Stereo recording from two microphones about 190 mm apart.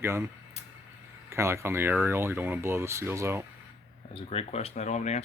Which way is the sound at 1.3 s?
15° right (ahead or behind).